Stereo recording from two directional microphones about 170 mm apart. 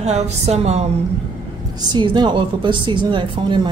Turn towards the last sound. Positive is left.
turn(degrees=-30)  # may be behind; listen again after turning